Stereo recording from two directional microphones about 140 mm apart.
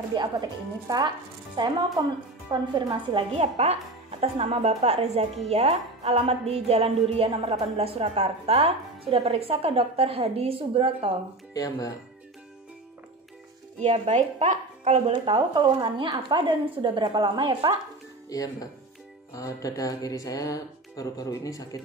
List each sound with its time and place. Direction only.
0.1 s a woman's voice: 30° right (ahead or behind)
11.5 s speech: 25° left (ahead or behind)
13.7 s speech: 50° right (ahead or behind)
15.3 s speech: 30° right (ahead or behind)
18.3 s speech: 25° left (ahead or behind)